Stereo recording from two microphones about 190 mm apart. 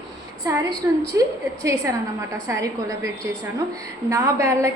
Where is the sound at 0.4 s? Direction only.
20° right (ahead or behind).